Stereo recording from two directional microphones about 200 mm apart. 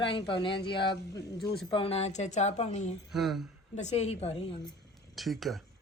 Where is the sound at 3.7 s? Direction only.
35° left (ahead or behind).